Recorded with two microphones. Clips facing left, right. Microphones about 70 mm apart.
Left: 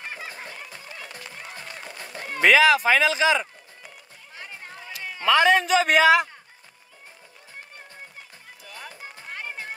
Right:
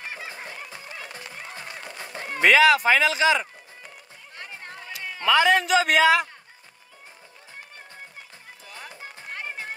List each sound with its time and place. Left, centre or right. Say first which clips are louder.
0.0 s fowl: even; centre
0.7 s music: right 1 dB; centre
1.3 s run: right 1 dB; right
2.4 s speech: even; centre
8.6 s music: left 1 dB; centre
9.3 s music: right 1 dB; centre